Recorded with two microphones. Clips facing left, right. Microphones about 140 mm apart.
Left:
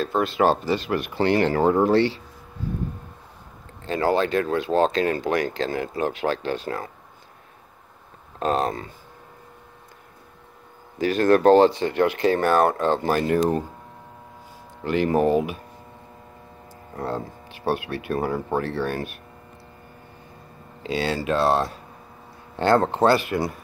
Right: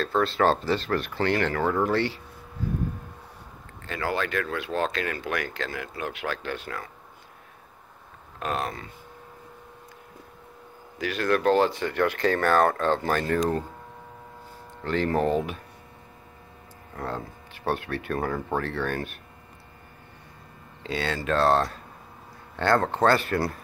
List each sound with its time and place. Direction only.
0.0 s speech: 15° left (ahead or behind)
3.8 s speech: 30° left (ahead or behind)
8.4 s speech: 30° left (ahead or behind)
11.0 s speech: 40° left (ahead or behind); by 13.4 s 15° left (ahead or behind)
14.8 s speech: 10° left (ahead or behind)
16.9 s speech: 30° left (ahead or behind)
17.5 s speech: 15° left (ahead or behind)
20.8 s speech: 15° left (ahead or behind)